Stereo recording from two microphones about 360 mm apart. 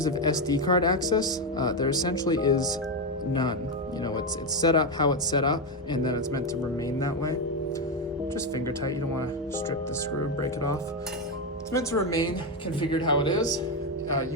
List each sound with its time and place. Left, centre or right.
0.0 s speech: centre
4.6 s speech: centre
10.4 s speech: centre